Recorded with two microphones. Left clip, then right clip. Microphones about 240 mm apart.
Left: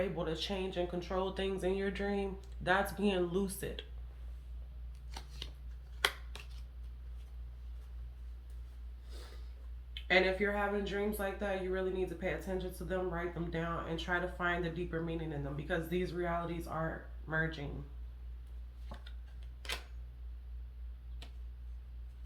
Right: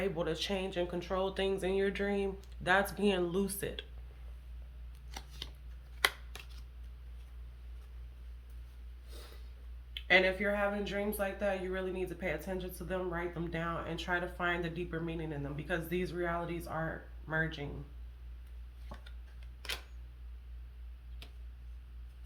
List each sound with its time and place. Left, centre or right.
0.0 s speech: right
5.1 s shuffling cards: right
6.0 s finger snapping: right
9.9 s speech: right
18.9 s tick-tock: right